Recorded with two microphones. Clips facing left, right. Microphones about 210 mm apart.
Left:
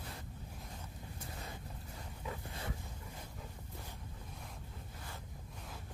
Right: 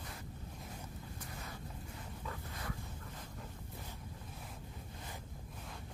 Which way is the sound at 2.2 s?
20° left (ahead or behind).